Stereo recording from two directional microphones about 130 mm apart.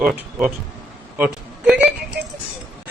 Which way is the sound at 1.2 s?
10° right (ahead or behind).